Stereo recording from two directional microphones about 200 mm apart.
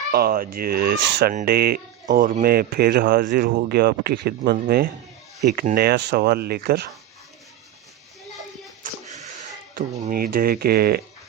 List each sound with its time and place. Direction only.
0.1 s speech: 50° right (ahead or behind)
9.0 s speech: 40° right (ahead or behind)